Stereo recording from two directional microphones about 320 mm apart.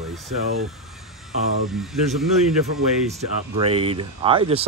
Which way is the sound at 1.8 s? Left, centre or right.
Centre.